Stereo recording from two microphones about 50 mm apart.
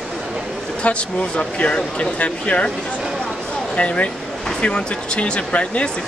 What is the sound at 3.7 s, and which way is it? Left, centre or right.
Speech, left.